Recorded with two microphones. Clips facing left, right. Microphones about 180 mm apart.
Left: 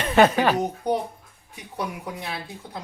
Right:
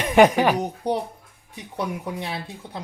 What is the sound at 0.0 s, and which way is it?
Speech, 15° right (ahead or behind).